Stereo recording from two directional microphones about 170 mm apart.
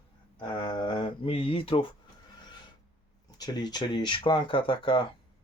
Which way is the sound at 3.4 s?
25° left (ahead or behind).